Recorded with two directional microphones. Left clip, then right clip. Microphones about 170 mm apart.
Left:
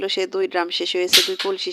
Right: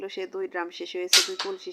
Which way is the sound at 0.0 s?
45° left (ahead or behind).